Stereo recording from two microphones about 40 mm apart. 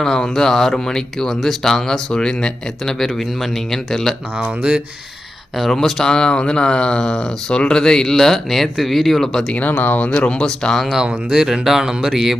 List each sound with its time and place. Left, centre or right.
0.0 s speech: centre
3.0 s speech: centre
4.4 s speech: right
5.7 s speech: centre
6.1 s a sound: left
7.0 s speech: centre
9.6 s speech: left
10.1 s a sound: left
10.4 s speech: centre
11.3 s speech: centre